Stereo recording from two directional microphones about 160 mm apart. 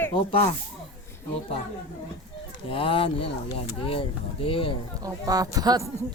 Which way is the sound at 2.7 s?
35° left (ahead or behind).